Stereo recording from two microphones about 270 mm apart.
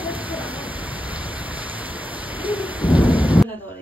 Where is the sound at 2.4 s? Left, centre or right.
Centre.